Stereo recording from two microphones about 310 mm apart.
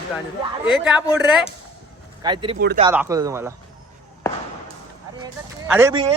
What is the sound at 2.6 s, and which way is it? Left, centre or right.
Speech, right.